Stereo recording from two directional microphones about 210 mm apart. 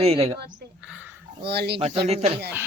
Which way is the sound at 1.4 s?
50° right (ahead or behind).